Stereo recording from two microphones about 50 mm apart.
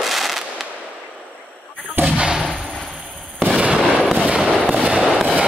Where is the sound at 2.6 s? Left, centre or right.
Centre.